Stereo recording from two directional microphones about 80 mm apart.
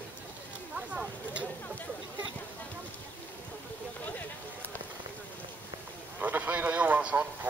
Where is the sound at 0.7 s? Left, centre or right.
Centre.